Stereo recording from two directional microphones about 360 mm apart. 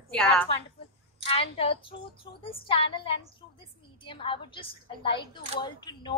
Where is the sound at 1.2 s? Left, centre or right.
Centre.